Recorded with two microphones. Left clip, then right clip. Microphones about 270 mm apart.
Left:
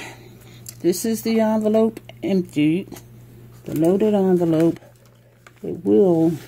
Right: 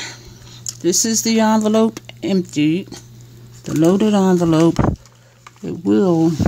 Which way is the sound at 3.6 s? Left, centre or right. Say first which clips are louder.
Right 3 dB; right.